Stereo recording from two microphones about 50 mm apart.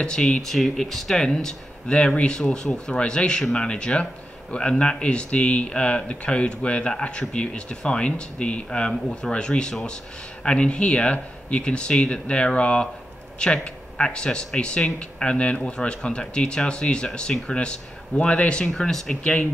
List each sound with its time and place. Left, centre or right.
0.0 s speech: centre
18.7 s speech: centre